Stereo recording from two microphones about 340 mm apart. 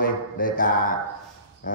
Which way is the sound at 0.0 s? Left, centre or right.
Left.